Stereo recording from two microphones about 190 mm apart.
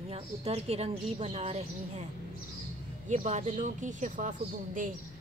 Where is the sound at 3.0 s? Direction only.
40° right (ahead or behind).